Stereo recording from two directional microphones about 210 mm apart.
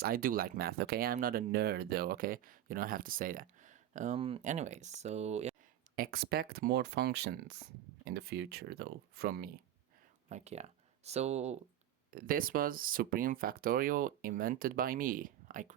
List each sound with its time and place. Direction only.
0.0 s speech: 45° right (ahead or behind)
6.0 s speech: 45° right (ahead or behind)
10.2 s speech: 30° right (ahead or behind)
12.1 s speech: 40° right (ahead or behind)